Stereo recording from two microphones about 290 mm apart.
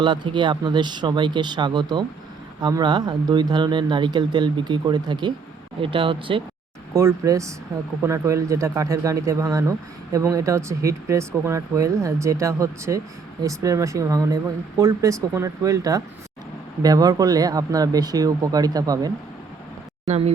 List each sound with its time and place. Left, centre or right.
0.0 s speech: centre